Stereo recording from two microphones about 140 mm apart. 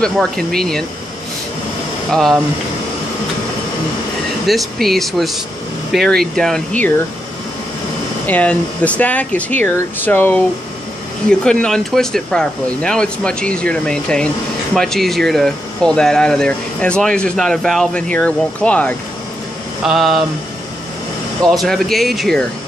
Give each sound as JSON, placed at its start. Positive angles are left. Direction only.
{"t": 0.0, "sound": "speech", "side_deg": 5}
{"t": 2.0, "sound": "speech", "side_deg": 0}
{"t": 4.5, "sound": "speech", "side_deg": 0}
{"t": 8.3, "sound": "speech", "side_deg": 10}
{"t": 19.8, "sound": "speech", "side_deg": 0}
{"t": 21.5, "sound": "speech", "side_deg": 0}